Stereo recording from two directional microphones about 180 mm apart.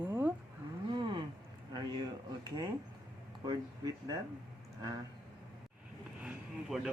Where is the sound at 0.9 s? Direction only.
25° right (ahead or behind).